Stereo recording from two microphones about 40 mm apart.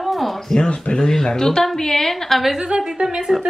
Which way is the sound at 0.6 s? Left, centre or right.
Left.